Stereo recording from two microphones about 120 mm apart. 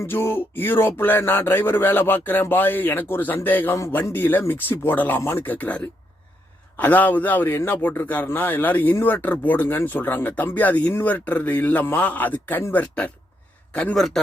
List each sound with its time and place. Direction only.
0.0 s a man's voice: 20° left (ahead or behind); by 14.2 s 5° left (ahead or behind)